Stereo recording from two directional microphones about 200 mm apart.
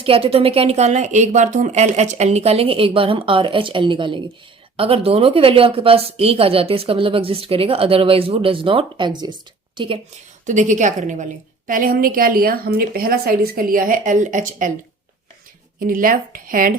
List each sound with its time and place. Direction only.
0.0 s a woman's voice: 30° right (ahead or behind)
10.4 s a woman's voice: 40° right (ahead or behind)
15.8 s a woman's voice: 45° right (ahead or behind)